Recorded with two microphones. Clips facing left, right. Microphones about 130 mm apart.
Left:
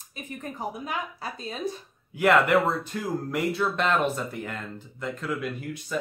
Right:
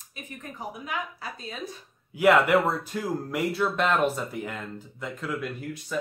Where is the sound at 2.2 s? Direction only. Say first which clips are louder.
Right 1 dB; 5° right (ahead or behind).